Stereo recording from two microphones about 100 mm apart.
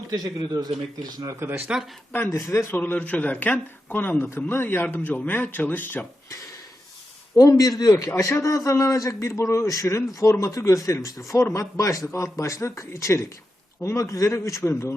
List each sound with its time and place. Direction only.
0.1 s a man's voice: 40° right (ahead or behind)
1.1 s a man's voice: 30° right (ahead or behind)
1.5 s speech: 20° right (ahead or behind)
2.3 s speech: 30° left (ahead or behind)
7.3 s a man's voice: 35° left (ahead or behind)